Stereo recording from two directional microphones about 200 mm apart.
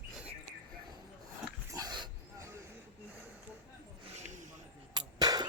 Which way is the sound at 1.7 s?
20° right (ahead or behind).